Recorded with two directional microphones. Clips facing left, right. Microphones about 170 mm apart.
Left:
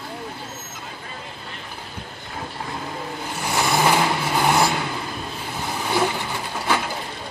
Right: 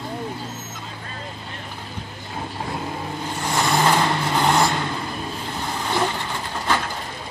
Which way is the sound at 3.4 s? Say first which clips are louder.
Even; 10° left (ahead or behind).